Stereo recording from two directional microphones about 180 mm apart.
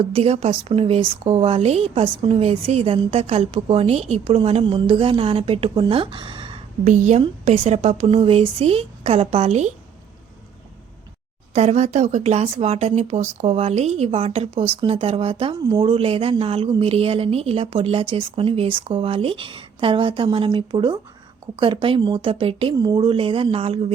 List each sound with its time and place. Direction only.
0.1 s speech: 35° right (ahead or behind)
6.8 s speech: 40° right (ahead or behind)
11.5 s speech: 40° right (ahead or behind)